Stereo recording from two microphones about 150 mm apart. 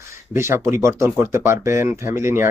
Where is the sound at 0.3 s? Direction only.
15° right (ahead or behind).